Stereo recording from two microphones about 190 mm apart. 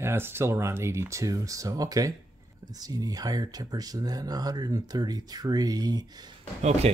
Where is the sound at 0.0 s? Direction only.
10° right (ahead or behind).